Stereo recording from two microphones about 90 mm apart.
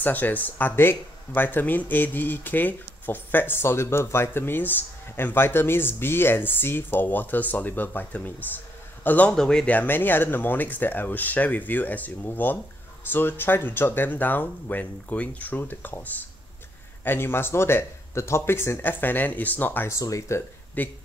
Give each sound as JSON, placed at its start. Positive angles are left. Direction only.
{"t": 0.0, "sound": "speech", "side_deg": 20}
{"t": 9.3, "sound": "speech", "side_deg": 5}
{"t": 9.8, "sound": "speech", "side_deg": 20}
{"t": 19.9, "sound": "speech", "side_deg": 35}
{"t": 20.8, "sound": "speech", "side_deg": 20}